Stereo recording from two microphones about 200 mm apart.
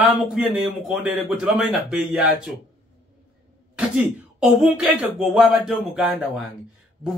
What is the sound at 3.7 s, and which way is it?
Speech, 5° right (ahead or behind).